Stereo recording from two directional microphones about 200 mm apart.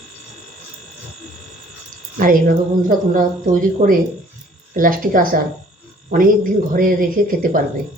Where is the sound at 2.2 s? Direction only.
45° right (ahead or behind).